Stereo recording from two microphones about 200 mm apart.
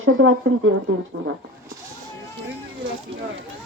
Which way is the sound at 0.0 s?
90° right.